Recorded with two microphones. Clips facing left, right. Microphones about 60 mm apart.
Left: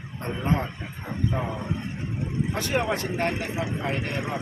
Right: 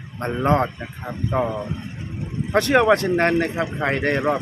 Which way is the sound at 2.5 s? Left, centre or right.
Right.